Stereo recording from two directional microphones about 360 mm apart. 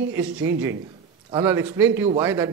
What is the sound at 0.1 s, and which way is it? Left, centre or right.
A man's voice, centre.